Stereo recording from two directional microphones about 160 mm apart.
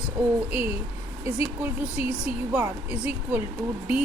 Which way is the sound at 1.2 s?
15° right (ahead or behind).